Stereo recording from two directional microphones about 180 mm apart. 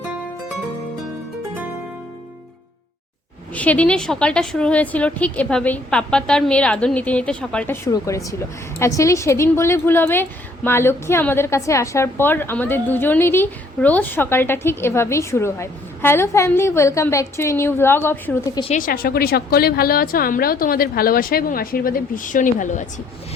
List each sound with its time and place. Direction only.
3.5 s a woman's voice: 10° left (ahead or behind)
18.8 s a woman's voice: 55° left (ahead or behind)